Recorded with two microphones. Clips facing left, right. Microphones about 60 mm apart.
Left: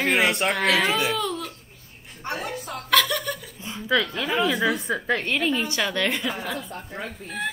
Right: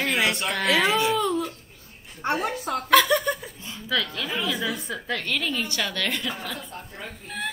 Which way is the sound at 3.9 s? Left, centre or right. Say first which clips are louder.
Left 4 dB; left.